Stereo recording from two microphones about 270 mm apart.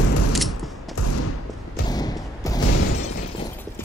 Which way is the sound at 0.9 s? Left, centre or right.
Left.